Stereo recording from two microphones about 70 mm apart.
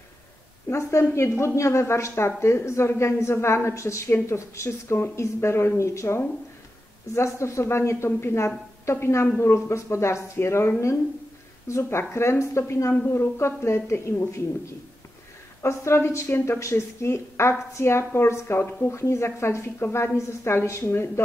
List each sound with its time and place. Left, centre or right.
0.7 s a woman's voice: left
15.6 s a woman's voice: left